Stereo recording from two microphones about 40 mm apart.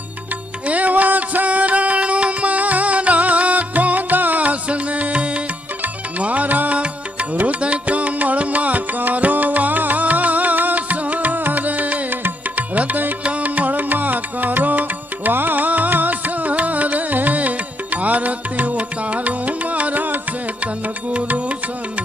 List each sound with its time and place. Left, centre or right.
0.7 s music: right
21.1 s music: right